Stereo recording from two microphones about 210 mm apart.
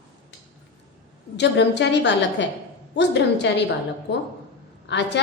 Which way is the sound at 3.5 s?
55° left (ahead or behind).